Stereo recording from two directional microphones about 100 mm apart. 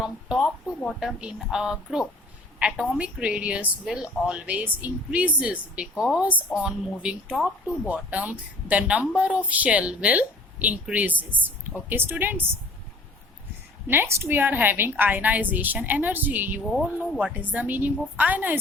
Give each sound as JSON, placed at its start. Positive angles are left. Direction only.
{"t": 0.0, "sound": "speech", "side_deg": -5}
{"t": 13.8, "sound": "a woman's voice", "side_deg": -20}